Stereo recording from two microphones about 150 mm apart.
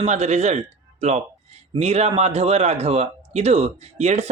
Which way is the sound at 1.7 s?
45° right (ahead or behind).